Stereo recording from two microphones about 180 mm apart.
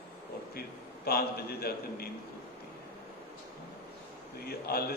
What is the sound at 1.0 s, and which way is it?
A man's voice, 60° left (ahead or behind).